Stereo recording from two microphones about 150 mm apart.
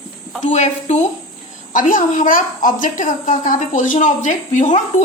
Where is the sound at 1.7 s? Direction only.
60° left (ahead or behind).